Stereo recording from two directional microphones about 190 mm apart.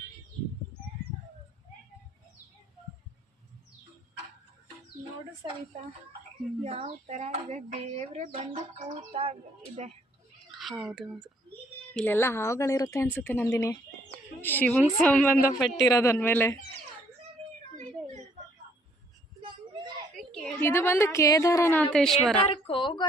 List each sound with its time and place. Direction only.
6.7 s speech: 35° right (ahead or behind)
10.5 s speech: centre (ahead or behind)
11.9 s speech: 10° left (ahead or behind)
17.7 s a sound: 40° right (ahead or behind)
19.4 s children playing: 25° right (ahead or behind)
20.4 s a woman's voice: 10° left (ahead or behind)
22.5 s a woman's voice: 30° left (ahead or behind)